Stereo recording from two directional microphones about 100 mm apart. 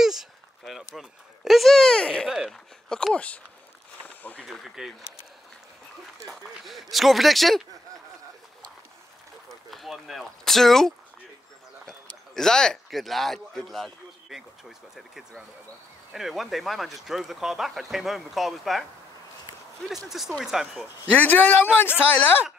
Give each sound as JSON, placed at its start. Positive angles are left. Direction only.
{"t": 0.0, "sound": "a sound", "side_deg": -5}
{"t": 2.2, "sound": "a man's voice", "side_deg": -5}
{"t": 4.0, "sound": "a sound", "side_deg": 15}
{"t": 4.5, "sound": "a man's voice", "side_deg": 0}
{"t": 6.2, "sound": "a man's voice", "side_deg": 0}
{"t": 9.7, "sound": "a man's voice", "side_deg": 0}
{"t": 12.4, "sound": "a man's voice", "side_deg": 5}
{"t": 20.1, "sound": "a man's voice", "side_deg": 0}
{"t": 21.1, "sound": "speech", "side_deg": 20}